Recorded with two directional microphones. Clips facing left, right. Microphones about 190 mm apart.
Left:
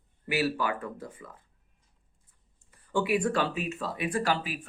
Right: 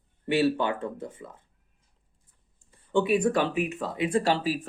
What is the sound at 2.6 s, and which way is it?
Speech, 25° right (ahead or behind).